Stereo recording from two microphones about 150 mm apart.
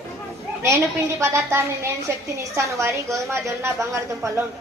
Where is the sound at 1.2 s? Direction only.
20° right (ahead or behind).